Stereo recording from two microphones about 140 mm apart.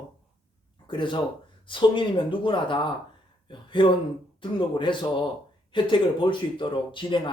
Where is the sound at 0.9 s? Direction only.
35° left (ahead or behind).